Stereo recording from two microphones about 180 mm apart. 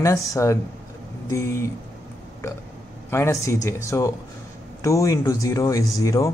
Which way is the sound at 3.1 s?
15° left (ahead or behind).